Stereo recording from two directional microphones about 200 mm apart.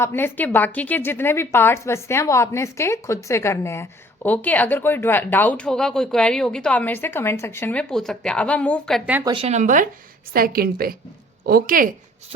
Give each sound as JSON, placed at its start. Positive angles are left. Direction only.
{"t": 0.0, "sound": "a woman's voice", "side_deg": 10}
{"t": 9.3, "sound": "a woman's voice", "side_deg": -30}